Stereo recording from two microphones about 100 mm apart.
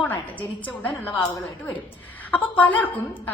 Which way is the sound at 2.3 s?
15° left (ahead or behind).